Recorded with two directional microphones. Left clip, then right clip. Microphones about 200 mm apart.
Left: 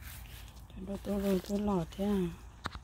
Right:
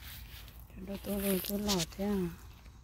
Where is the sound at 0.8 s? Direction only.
5° left (ahead or behind).